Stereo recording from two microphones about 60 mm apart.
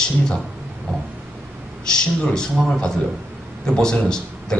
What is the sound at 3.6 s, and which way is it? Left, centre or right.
Speech, centre.